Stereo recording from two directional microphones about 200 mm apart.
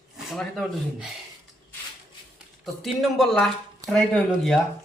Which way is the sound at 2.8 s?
Centre (ahead or behind).